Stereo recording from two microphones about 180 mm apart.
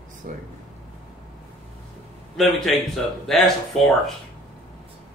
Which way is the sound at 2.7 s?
Centre (ahead or behind).